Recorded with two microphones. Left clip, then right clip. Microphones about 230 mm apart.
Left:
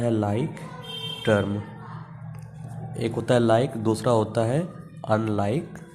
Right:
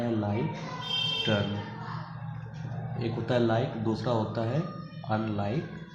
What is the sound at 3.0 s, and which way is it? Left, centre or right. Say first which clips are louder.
Speech: left 6 dB; left.